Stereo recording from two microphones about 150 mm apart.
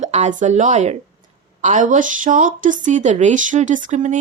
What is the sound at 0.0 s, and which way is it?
A woman's voice, 50° right (ahead or behind).